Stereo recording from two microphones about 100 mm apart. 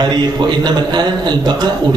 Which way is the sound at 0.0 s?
45° right (ahead or behind).